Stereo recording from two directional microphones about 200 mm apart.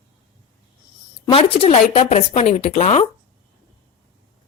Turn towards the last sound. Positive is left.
turn(degrees=35)  # may be behind; listen again after turning